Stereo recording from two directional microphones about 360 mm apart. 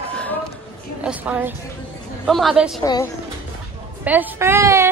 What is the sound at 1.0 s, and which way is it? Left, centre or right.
A woman's voice, centre.